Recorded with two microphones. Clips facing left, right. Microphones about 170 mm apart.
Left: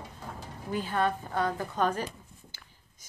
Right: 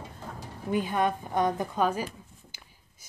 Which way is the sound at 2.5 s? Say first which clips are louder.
Right 1 dB; 15° right (ahead or behind).